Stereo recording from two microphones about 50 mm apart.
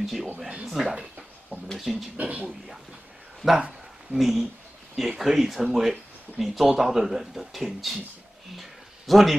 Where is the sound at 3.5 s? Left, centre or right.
Centre.